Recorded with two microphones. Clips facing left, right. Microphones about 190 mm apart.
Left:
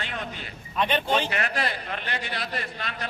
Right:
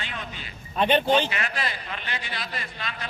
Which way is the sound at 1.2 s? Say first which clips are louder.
Left 2 dB; 50° left (ahead or behind).